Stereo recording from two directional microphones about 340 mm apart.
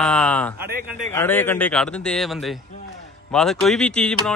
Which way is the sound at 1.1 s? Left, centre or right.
Centre.